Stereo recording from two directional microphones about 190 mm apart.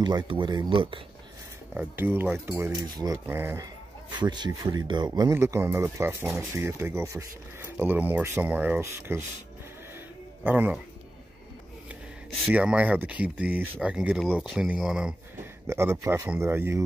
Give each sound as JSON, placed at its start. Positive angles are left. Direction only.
{"t": 0.0, "sound": "speech", "side_deg": -25}
{"t": 1.7, "sound": "speech", "side_deg": -10}
{"t": 4.2, "sound": "speech", "side_deg": -25}
{"t": 9.9, "sound": "music", "side_deg": -10}
{"t": 11.9, "sound": "speech", "side_deg": -5}